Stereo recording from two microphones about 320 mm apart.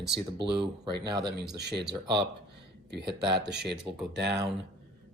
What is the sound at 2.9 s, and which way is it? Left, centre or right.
Speech, right.